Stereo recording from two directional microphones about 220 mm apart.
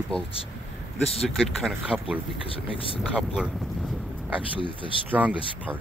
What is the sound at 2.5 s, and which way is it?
Speech, 25° left (ahead or behind).